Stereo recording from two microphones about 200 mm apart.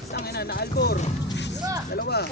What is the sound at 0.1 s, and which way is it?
Speech, 50° left (ahead or behind).